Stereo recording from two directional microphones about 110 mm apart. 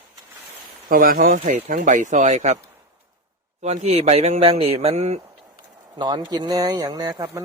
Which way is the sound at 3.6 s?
90° right.